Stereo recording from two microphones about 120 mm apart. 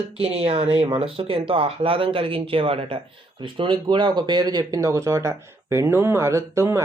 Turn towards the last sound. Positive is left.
turn(degrees=-20)  # may be behind; listen again after turning